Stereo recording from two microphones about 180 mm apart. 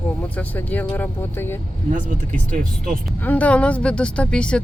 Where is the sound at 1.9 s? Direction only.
45° right (ahead or behind).